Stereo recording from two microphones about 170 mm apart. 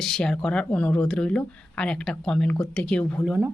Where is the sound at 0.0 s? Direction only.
5° left (ahead or behind).